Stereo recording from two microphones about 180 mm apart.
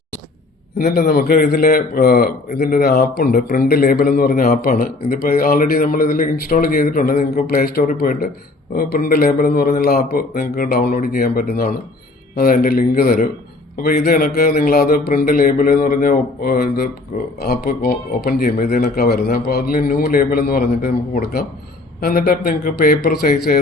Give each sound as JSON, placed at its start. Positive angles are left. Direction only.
{"t": 0.8, "sound": "a man's voice", "side_deg": 55}